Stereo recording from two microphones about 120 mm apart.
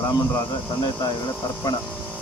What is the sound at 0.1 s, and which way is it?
Speech, 35° left (ahead or behind).